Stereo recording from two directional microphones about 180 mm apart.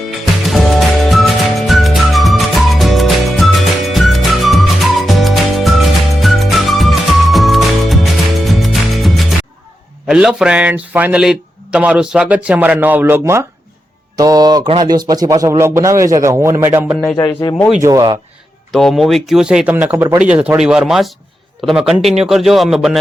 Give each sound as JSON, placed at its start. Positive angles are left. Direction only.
{"t": 0.4, "sound": "music", "side_deg": 0}
{"t": 10.1, "sound": "a man's voice", "side_deg": -5}
{"t": 17.2, "sound": "speech", "side_deg": 20}
{"t": 17.8, "sound": "speech", "side_deg": -20}
{"t": 18.7, "sound": "speech", "side_deg": 0}